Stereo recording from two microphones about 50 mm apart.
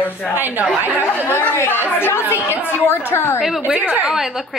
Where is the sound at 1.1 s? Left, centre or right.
Left.